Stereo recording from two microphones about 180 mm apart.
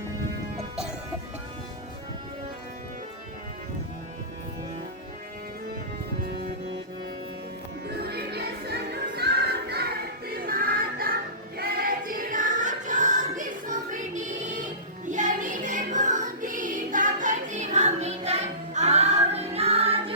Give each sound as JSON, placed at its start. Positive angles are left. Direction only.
{"t": 7.9, "sound": "music", "side_deg": -60}